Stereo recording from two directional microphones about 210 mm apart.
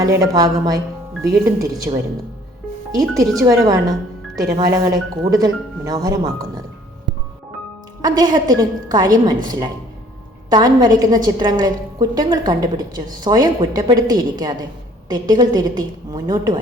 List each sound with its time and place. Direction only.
0.0 s a woman's voice: 15° right (ahead or behind)
8.0 s a woman's voice: 20° right (ahead or behind)